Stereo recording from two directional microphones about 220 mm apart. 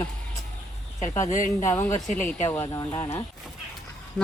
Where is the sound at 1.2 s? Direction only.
35° left (ahead or behind).